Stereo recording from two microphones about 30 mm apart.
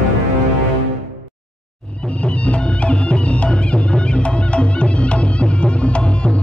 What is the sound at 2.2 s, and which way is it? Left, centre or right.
Music, left.